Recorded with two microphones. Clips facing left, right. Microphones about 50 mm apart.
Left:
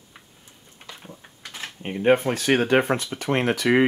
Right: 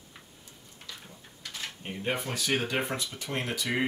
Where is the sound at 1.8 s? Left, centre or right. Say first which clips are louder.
Left 14 dB; left.